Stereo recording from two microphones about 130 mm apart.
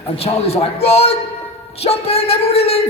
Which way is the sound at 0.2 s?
50° left (ahead or behind).